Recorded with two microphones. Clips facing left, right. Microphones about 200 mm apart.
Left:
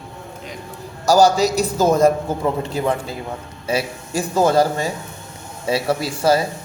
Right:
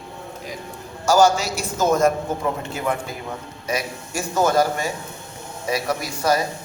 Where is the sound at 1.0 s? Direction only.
35° left (ahead or behind).